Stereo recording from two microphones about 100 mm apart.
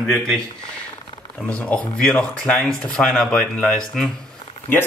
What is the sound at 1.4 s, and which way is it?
Speech, 10° left (ahead or behind).